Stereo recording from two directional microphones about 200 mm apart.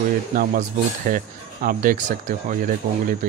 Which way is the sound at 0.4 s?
45° right (ahead or behind).